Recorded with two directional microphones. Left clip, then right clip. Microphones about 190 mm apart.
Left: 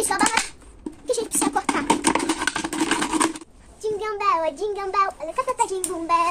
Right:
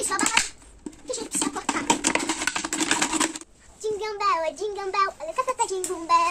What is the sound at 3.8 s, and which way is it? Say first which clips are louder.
Goat: left 2 dB; centre (ahead or behind).